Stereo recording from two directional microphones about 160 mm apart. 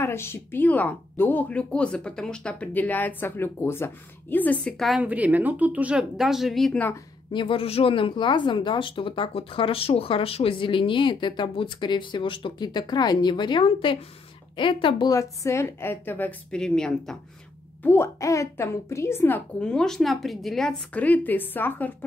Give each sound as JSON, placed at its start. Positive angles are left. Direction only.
{"t": 0.0, "sound": "speech", "side_deg": 15}
{"t": 5.0, "sound": "speech", "side_deg": -10}
{"t": 7.3, "sound": "speech", "side_deg": 35}
{"t": 17.8, "sound": "speech", "side_deg": 15}